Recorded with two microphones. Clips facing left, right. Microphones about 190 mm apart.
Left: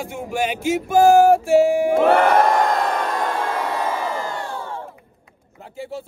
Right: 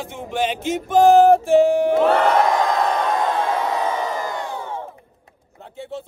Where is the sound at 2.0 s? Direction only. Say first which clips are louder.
Left 1 dB; 55° left (ahead or behind).